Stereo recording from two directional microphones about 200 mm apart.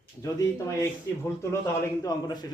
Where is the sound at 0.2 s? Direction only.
15° left (ahead or behind).